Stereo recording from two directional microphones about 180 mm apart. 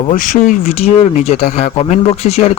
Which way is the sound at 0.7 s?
35° left (ahead or behind).